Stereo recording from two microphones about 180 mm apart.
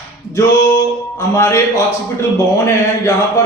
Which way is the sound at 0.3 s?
20° left (ahead or behind).